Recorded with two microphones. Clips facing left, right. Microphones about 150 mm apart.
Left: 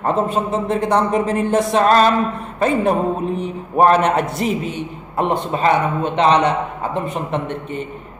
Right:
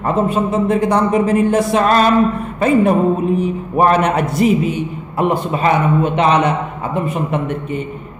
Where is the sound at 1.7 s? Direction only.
35° left (ahead or behind).